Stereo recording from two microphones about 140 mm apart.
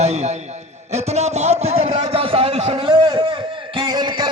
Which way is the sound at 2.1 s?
40° right (ahead or behind).